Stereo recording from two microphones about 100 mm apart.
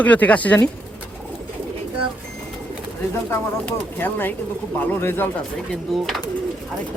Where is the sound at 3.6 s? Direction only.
20° left (ahead or behind).